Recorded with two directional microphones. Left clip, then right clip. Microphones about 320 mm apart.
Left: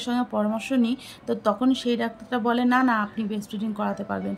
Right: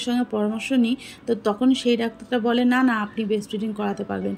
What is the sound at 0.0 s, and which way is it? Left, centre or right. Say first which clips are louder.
Speech: right 1 dB; centre.